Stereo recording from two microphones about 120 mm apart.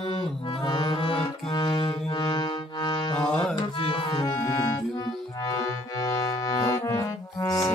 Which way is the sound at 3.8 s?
45° left (ahead or behind).